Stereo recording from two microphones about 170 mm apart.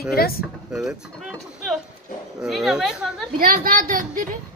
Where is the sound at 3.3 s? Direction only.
60° right (ahead or behind).